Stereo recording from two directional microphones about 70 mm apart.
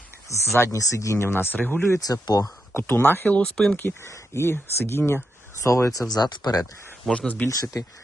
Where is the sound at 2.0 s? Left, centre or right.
Left.